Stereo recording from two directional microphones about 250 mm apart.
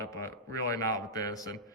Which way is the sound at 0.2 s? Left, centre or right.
Centre.